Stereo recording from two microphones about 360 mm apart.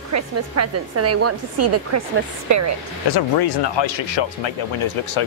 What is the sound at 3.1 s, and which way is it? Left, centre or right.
Speech, left.